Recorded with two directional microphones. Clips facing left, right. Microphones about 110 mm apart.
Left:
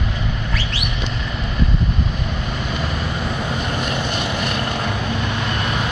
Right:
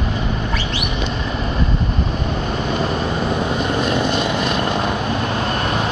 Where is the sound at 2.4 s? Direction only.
35° right (ahead or behind).